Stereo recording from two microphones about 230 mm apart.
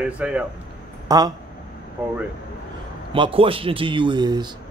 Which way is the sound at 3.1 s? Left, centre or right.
Right.